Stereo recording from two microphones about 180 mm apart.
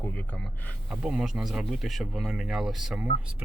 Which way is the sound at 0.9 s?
5° right (ahead or behind).